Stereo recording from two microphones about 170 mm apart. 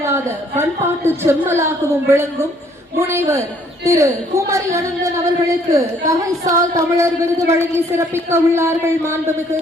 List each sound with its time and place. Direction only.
0.0 s a woman's voice: 15° right (ahead or behind)